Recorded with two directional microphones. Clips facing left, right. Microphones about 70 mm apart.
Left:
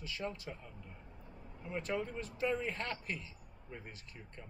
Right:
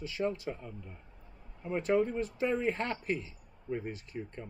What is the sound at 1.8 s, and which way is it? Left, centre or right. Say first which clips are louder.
A man's voice: right 11 dB; right.